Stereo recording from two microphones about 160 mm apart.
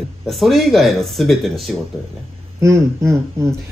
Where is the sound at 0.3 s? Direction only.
Centre (ahead or behind).